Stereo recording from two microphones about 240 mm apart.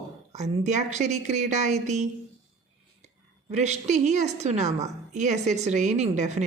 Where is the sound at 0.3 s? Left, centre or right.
Right.